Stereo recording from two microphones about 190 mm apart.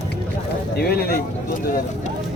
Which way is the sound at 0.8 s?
55° left (ahead or behind).